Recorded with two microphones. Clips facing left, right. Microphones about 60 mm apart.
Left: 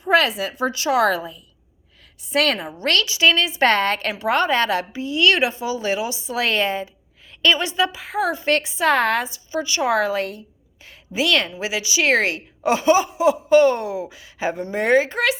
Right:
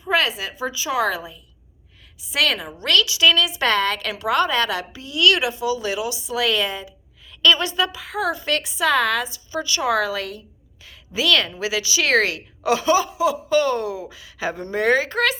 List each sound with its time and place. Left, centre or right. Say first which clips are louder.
0.0 s a sound: left 3 dB; left
0.3 s a woman's voice: left 4 dB; left
2.2 s a woman's voice: left 2 dB; left
2.7 s a woman's voice: right 1 dB; left
7.4 s a woman's voice: even; left